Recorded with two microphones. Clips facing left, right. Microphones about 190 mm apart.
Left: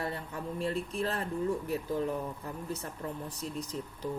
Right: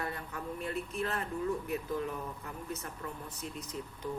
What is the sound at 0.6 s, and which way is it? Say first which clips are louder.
Speech: left 4 dB; 35° left (ahead or behind).